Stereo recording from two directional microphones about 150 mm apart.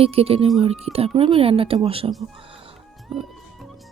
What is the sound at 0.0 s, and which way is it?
Speech, 40° right (ahead or behind).